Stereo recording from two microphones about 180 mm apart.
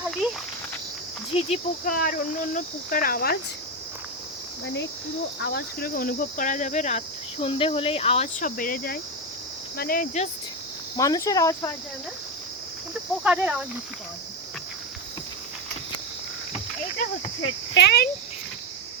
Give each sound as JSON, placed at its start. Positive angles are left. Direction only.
{"t": 1.3, "sound": "speech", "side_deg": 35}
{"t": 1.9, "sound": "speech", "side_deg": 50}
{"t": 4.6, "sound": "speech", "side_deg": 75}
{"t": 10.9, "sound": "speech", "side_deg": 20}
{"t": 13.2, "sound": "speech", "side_deg": -5}
{"t": 17.4, "sound": "speech", "side_deg": 70}